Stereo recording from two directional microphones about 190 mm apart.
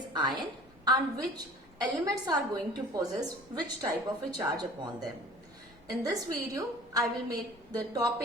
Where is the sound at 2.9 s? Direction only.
20° right (ahead or behind).